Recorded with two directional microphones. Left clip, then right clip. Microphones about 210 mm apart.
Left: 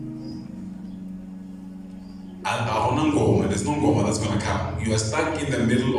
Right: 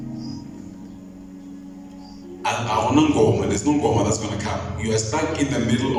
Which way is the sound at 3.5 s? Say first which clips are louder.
Right 3 dB; 35° right (ahead or behind).